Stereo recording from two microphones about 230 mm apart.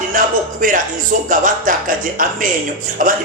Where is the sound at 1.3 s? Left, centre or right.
Right.